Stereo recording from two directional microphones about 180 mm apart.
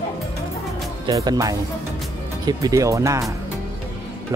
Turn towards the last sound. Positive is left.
turn(degrees=-15)  # may be behind; listen again after turning